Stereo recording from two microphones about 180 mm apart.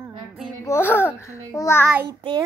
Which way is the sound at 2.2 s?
25° right (ahead or behind).